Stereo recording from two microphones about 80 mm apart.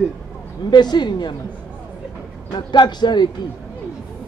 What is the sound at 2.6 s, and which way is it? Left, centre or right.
Speech, left.